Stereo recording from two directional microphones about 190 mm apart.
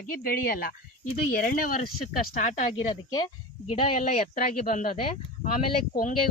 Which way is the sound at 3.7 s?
35° left (ahead or behind).